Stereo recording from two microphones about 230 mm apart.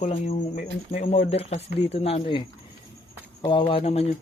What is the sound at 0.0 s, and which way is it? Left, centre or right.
Speech, left.